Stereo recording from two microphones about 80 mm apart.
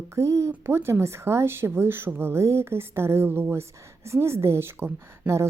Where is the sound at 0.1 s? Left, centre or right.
Right.